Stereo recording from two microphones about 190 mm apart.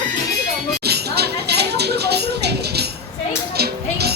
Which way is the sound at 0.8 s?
60° right (ahead or behind).